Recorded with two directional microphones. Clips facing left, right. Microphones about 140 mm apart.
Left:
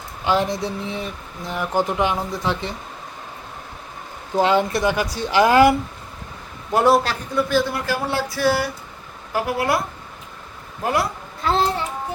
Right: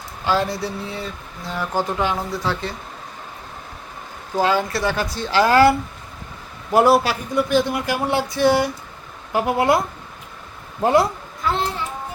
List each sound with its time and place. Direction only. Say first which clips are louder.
0.3 s speech: left 1 dB; 20° left (ahead or behind)
4.4 s speech: left 2 dB; 20° left (ahead or behind)
6.7 s speech: right 2 dB; 5° right (ahead or behind); by 9.8 s 20° right (ahead or behind)
10.8 s speech: right 6 dB; 25° right (ahead or behind)